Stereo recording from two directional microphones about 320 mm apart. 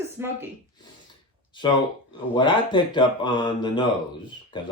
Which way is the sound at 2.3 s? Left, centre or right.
Centre.